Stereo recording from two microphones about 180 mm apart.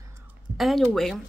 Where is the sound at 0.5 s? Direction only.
Centre (ahead or behind).